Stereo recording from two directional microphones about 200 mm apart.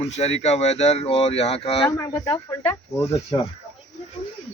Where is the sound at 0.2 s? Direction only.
30° left (ahead or behind).